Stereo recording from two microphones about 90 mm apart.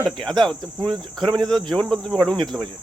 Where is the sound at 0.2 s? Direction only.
5° left (ahead or behind).